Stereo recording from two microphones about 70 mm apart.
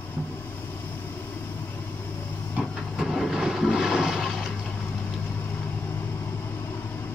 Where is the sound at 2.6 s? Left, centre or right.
Centre.